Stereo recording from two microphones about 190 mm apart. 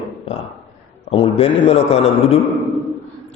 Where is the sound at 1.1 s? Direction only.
30° left (ahead or behind).